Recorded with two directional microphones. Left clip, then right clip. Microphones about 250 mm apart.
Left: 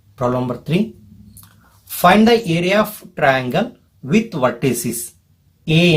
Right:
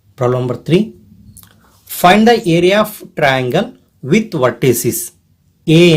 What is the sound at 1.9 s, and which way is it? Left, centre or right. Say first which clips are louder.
Speech: right 3 dB; right.